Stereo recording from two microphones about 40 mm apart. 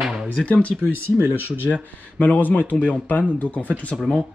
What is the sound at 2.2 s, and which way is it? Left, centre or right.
Speech, left.